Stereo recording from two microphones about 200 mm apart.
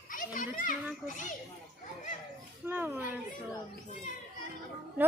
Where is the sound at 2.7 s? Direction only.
10° right (ahead or behind).